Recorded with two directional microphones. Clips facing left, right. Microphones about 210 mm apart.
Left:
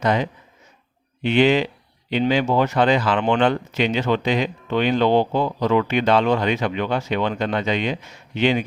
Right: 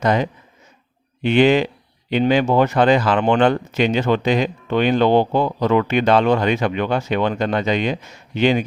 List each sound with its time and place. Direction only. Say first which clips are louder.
0.0 s speech: right 2 dB; 45° right (ahead or behind)